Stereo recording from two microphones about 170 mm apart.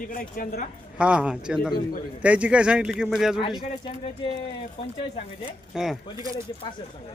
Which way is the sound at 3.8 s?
30° left (ahead or behind).